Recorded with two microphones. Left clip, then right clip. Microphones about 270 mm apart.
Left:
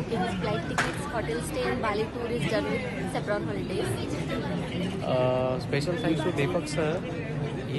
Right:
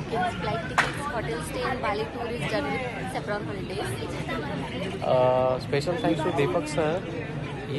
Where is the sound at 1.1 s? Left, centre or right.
Centre.